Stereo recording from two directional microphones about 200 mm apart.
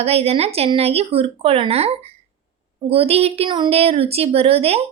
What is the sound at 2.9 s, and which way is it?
A woman's voice, 30° right (ahead or behind).